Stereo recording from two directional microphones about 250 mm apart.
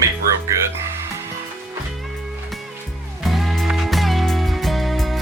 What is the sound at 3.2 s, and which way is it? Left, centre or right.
Music, centre.